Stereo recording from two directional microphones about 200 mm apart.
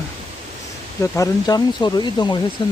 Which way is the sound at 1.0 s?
15° left (ahead or behind).